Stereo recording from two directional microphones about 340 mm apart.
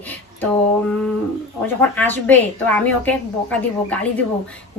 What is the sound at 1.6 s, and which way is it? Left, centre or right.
Speech, centre.